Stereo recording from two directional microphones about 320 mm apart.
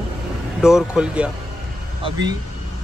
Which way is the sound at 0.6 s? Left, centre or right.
Centre.